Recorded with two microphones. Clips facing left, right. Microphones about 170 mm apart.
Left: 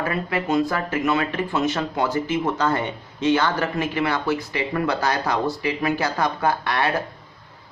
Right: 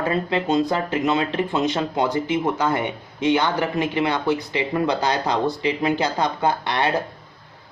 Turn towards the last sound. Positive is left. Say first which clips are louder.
# right 1 dB
turn(degrees=-20)  # may be behind; listen again after turning